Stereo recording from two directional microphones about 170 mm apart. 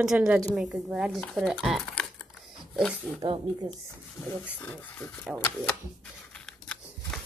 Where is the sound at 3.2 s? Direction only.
25° right (ahead or behind).